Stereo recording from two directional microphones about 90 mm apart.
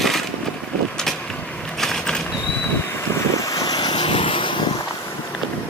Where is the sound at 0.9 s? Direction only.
5° left (ahead or behind).